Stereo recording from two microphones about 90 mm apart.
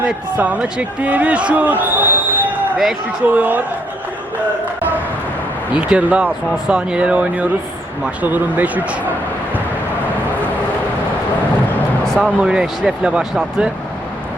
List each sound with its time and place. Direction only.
0.0 s speech: 15° right (ahead or behind)
5.7 s speech: 10° right (ahead or behind)
12.0 s a sound: 5° left (ahead or behind)
12.4 s speech: 10° right (ahead or behind)